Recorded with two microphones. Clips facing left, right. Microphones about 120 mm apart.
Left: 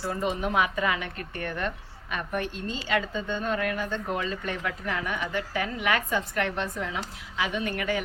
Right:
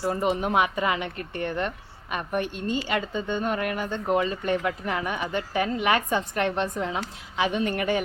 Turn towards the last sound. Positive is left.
turn(degrees=-25)  # may be behind; listen again after turning